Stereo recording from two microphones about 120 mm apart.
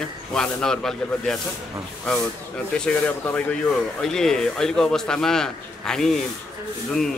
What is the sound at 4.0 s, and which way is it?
A man's voice, 5° left (ahead or behind).